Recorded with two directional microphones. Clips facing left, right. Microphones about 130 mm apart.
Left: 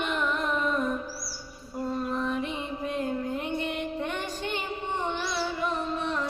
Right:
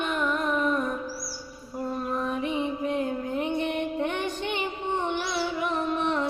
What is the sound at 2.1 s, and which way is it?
Music, 15° right (ahead or behind).